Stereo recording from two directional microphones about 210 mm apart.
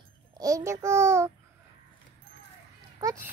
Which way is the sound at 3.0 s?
15° right (ahead or behind).